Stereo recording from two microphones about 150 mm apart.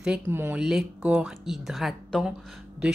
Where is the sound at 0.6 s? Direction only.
5° right (ahead or behind).